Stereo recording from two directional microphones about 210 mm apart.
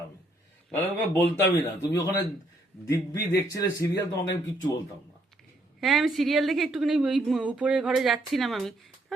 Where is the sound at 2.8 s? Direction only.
15° left (ahead or behind).